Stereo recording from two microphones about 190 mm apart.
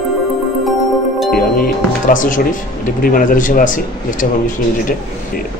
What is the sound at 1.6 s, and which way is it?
Speech, 45° left (ahead or behind).